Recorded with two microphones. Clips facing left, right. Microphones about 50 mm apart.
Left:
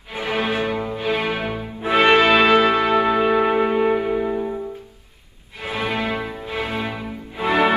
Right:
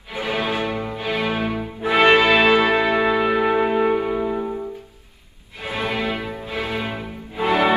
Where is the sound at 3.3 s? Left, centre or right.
Left.